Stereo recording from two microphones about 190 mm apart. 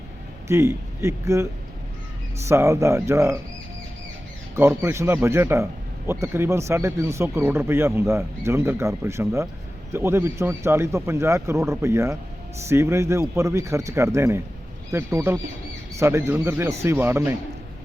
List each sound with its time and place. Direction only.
0.4 s speech: 15° right (ahead or behind)
2.5 s speech: 15° right (ahead or behind)
4.5 s speech: 15° right (ahead or behind)